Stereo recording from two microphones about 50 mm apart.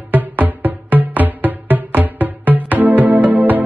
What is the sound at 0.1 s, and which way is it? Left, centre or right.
Music, right.